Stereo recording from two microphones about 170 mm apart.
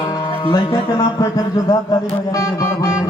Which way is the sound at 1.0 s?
20° left (ahead or behind).